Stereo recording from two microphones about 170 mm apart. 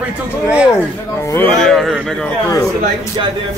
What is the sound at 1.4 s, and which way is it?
Speech, 5° left (ahead or behind).